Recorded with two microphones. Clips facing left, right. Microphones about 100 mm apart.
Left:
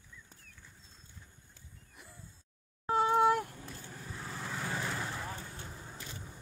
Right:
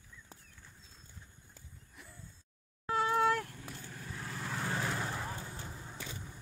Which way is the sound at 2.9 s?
25° left (ahead or behind).